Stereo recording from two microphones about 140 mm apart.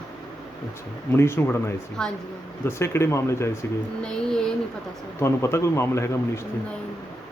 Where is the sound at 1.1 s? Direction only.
20° left (ahead or behind).